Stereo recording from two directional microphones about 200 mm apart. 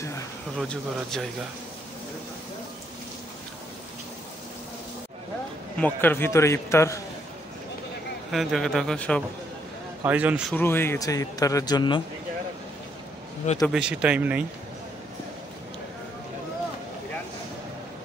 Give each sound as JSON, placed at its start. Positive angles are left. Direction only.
{"t": 0.6, "sound": "speech", "side_deg": 5}
{"t": 5.8, "sound": "speech", "side_deg": 10}
{"t": 8.3, "sound": "speech", "side_deg": 0}
{"t": 10.0, "sound": "speech", "side_deg": -10}
{"t": 10.5, "sound": "speech", "side_deg": 10}
{"t": 13.6, "sound": "speech", "side_deg": -5}